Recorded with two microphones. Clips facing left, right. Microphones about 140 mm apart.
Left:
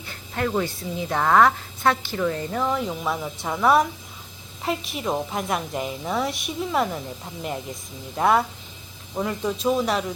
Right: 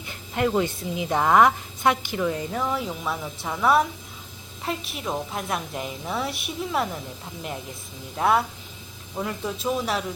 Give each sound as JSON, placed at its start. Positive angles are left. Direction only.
{"t": 0.0, "sound": "a woman's voice", "side_deg": -15}
{"t": 8.1, "sound": "a woman's voice", "side_deg": 0}